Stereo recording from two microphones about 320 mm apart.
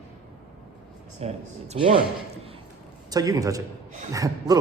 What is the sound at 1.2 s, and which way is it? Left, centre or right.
Speech, centre.